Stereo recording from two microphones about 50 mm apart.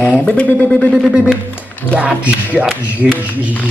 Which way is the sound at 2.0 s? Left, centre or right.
Right.